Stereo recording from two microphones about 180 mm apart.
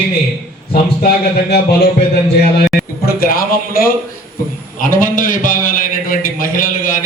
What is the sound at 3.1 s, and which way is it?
A man's voice, 55° left (ahead or behind).